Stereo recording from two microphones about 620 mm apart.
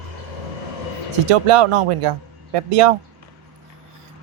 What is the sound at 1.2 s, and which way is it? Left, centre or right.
Speech, right.